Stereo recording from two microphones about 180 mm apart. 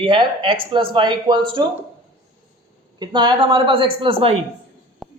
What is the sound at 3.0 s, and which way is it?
A man's voice, 25° right (ahead or behind).